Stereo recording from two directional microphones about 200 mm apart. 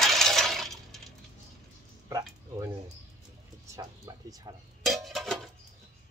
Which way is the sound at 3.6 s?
15° right (ahead or behind).